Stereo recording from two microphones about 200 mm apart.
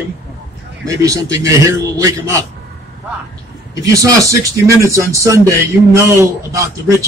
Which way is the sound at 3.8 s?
15° right (ahead or behind).